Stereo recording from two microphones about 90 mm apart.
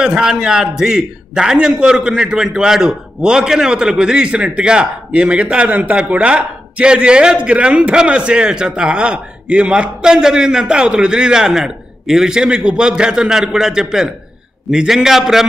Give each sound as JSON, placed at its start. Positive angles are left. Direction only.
{"t": 0.0, "sound": "a man's voice", "side_deg": -5}